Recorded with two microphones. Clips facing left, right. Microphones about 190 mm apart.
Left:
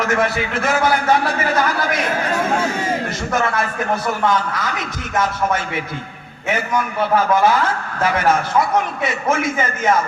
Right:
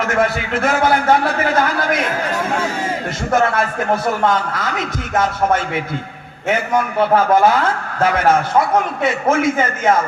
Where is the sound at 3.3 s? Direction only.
55° right (ahead or behind).